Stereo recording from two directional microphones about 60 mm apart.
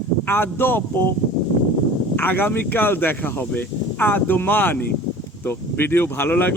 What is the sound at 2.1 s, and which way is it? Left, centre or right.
Speech, left.